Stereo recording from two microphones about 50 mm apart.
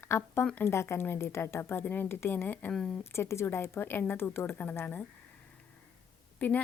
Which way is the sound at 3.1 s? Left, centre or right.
Left.